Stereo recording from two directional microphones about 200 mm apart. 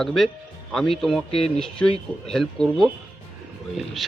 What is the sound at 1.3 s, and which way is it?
Speech, 30° left (ahead or behind).